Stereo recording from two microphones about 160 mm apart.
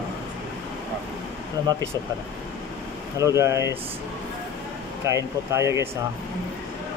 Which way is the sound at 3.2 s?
20° right (ahead or behind).